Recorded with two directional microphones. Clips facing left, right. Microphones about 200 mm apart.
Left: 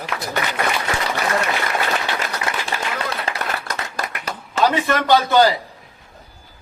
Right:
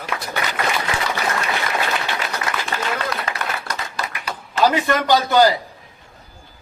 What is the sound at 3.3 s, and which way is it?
Applause, 30° left (ahead or behind).